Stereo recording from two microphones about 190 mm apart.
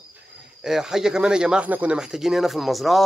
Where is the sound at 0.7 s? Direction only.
Centre (ahead or behind).